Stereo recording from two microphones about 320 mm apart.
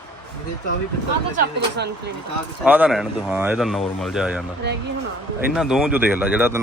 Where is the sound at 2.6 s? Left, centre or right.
Centre.